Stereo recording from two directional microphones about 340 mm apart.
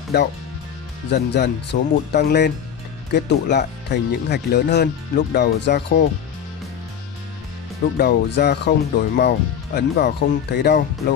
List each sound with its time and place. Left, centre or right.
1.1 s speech: left
8.0 s speech: left